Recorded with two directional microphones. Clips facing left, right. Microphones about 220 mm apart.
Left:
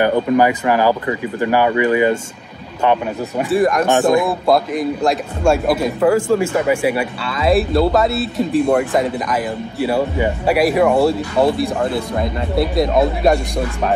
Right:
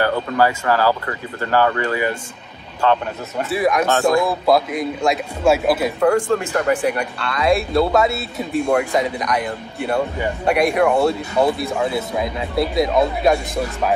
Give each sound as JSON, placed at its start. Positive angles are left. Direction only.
{"t": 0.0, "sound": "speech", "side_deg": 15}
{"t": 3.4, "sound": "speech", "side_deg": 0}
{"t": 3.8, "sound": "speech", "side_deg": 20}
{"t": 4.3, "sound": "speech", "side_deg": 0}